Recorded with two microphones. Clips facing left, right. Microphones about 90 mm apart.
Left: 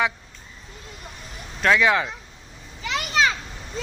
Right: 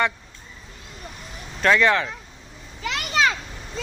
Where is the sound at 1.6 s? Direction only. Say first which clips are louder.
Right 1 dB; 5° left (ahead or behind).